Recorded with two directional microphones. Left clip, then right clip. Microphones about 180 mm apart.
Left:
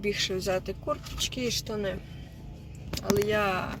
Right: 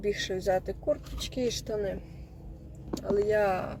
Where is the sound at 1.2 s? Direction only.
60° left (ahead or behind).